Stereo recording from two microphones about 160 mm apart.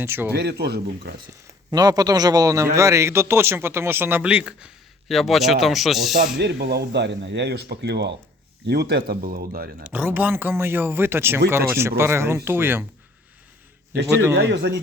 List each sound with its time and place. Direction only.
0.0 s a man's voice: 15° right (ahead or behind)
0.3 s speech: 90° right
1.7 s a man's voice: 25° right (ahead or behind); by 6.2 s centre (ahead or behind)
6.4 s speech: 90° right; by 9.9 s 65° right (ahead or behind)
9.9 s a man's voice: 10° right (ahead or behind)
14.1 s a man's voice: 15° right (ahead or behind)
14.5 s speech: 90° right